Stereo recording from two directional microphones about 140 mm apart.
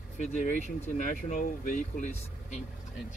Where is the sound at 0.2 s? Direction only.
55° left (ahead or behind).